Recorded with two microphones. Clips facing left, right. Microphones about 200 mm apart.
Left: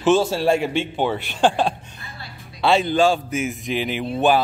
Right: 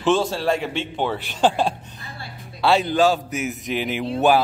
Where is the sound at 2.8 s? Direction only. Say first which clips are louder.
Left 1 dB; 5° right (ahead or behind).